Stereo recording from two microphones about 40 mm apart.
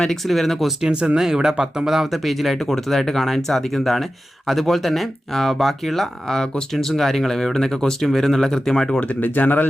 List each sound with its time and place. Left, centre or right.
0.3 s speech: centre
1.2 s speech: centre
2.2 s speech: centre
9.0 s speech: left